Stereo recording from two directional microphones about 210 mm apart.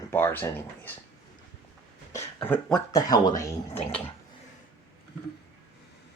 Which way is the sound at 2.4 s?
10° left (ahead or behind).